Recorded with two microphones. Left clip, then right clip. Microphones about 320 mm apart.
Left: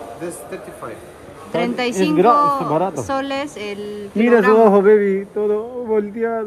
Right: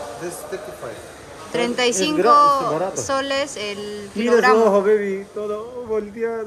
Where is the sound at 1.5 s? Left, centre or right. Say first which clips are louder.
Right 1 dB; centre.